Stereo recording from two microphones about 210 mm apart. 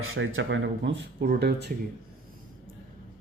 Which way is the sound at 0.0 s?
70° right (ahead or behind).